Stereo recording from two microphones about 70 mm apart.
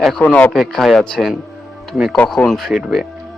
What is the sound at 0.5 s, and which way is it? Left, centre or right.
Speech, centre.